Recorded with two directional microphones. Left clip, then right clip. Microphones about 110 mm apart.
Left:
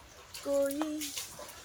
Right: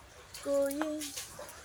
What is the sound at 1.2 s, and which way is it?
Dog, 15° left (ahead or behind).